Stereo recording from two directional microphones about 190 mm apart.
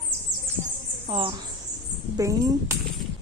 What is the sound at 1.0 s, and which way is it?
Speech, 30° right (ahead or behind).